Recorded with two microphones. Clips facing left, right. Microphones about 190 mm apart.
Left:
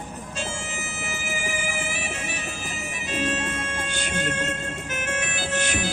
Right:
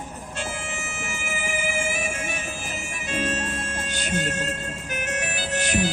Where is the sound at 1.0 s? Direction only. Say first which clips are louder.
Left 1 dB; 55° right (ahead or behind).